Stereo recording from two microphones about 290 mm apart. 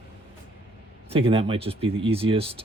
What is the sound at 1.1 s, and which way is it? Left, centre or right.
Speech, centre.